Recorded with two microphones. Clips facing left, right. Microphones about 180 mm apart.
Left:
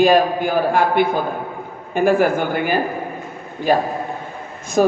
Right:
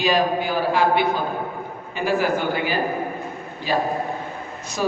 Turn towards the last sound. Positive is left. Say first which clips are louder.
# left 8 dB
turn(degrees=50)  # may be behind; listen again after turning